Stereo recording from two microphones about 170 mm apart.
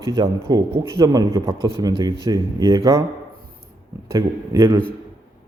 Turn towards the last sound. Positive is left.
turn(degrees=-15)  # may be behind; listen again after turning